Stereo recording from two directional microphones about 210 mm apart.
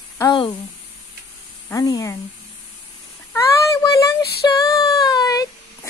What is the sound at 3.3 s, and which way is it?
Child singing, 15° left (ahead or behind).